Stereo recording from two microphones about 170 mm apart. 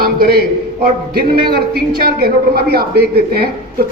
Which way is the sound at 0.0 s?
65° right (ahead or behind).